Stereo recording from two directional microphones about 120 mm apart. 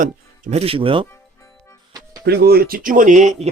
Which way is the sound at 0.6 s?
50° right (ahead or behind).